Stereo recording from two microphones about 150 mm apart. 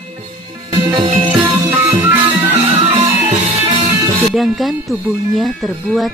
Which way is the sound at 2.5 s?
45° right (ahead or behind).